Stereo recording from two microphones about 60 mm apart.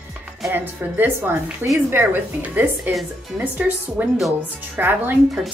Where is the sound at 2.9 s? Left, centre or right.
Right.